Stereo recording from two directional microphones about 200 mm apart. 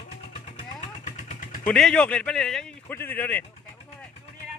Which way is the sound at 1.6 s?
5° left (ahead or behind).